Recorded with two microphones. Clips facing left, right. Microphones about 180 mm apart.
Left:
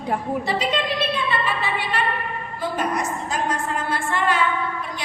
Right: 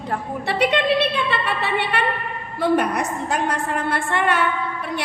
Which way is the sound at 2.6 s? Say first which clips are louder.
Right 5 dB; 65° right (ahead or behind).